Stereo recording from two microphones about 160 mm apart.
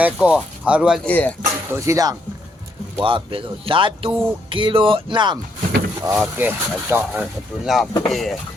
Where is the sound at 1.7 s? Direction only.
20° right (ahead or behind).